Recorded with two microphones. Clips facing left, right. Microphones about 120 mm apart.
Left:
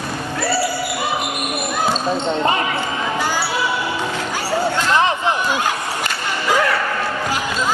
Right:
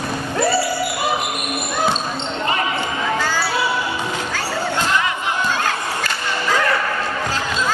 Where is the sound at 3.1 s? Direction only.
15° left (ahead or behind).